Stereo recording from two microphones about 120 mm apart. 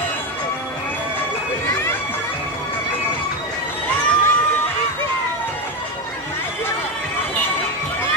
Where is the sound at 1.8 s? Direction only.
15° left (ahead or behind).